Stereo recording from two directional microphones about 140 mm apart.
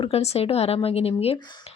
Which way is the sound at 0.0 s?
45° left (ahead or behind).